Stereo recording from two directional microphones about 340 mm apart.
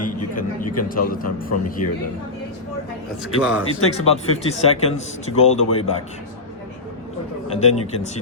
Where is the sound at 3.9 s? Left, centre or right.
Centre.